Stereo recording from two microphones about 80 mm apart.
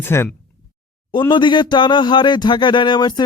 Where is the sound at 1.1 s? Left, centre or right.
Left.